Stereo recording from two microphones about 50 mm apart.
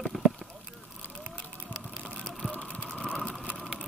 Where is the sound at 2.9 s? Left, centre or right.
Centre.